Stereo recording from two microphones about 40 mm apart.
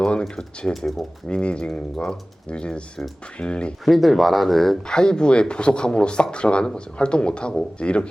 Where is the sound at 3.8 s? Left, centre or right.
Centre.